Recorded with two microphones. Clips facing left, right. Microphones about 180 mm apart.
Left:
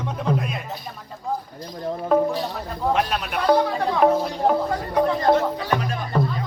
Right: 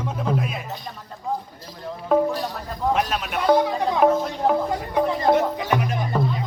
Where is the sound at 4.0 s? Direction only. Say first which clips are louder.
Left 1 dB; centre (ahead or behind).